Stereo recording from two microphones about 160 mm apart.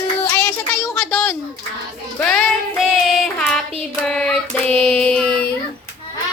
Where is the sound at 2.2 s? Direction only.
5° left (ahead or behind).